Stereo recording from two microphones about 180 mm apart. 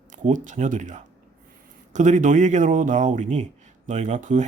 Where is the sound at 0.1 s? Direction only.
45° right (ahead or behind).